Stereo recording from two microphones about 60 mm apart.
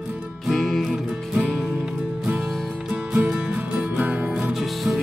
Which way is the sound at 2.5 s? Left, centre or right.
Centre.